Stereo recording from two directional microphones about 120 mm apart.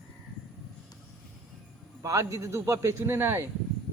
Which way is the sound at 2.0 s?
25° right (ahead or behind).